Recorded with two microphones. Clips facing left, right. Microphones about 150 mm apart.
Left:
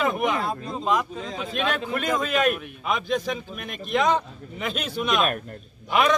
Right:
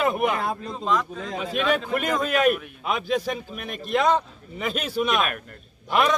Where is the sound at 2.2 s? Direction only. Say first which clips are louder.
Right 2 dB; 5° right (ahead or behind).